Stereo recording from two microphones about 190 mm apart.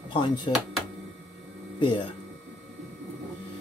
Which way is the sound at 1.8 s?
25° left (ahead or behind).